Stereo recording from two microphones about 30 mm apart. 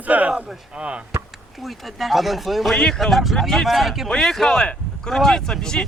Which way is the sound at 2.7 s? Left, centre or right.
Left.